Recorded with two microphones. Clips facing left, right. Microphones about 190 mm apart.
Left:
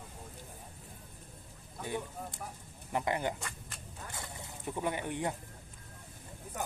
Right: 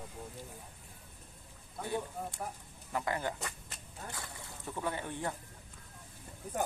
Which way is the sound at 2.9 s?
20° left (ahead or behind).